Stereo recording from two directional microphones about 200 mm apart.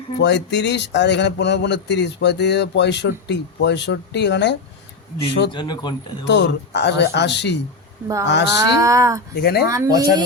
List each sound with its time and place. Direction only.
0.2 s speech: 60° left (ahead or behind)
5.5 s speech: 20° left (ahead or behind)
6.2 s speech: 60° left (ahead or behind)
8.0 s speech: 15° right (ahead or behind)
8.3 s speech: 60° left (ahead or behind)
8.5 s speech: 15° right (ahead or behind)
9.3 s speech: 55° left (ahead or behind)
9.6 s speech: 15° right (ahead or behind)